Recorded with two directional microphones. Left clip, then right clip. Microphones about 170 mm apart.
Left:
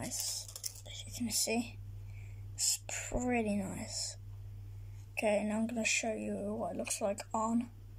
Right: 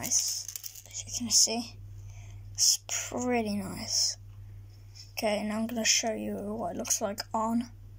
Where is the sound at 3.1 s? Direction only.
20° left (ahead or behind).